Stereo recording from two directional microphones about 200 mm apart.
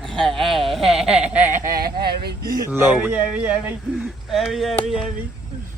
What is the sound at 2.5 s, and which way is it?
Speech, 15° right (ahead or behind).